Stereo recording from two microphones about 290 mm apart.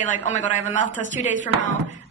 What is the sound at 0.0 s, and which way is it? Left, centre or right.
Speech, left.